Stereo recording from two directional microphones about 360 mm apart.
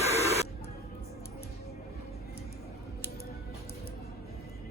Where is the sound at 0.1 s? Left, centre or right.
Centre.